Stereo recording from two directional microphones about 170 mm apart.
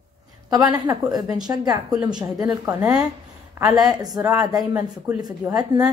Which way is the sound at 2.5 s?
20° right (ahead or behind).